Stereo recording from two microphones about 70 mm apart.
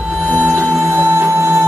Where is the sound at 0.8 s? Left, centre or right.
Right.